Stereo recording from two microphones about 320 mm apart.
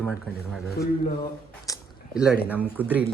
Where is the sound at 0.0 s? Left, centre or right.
Centre.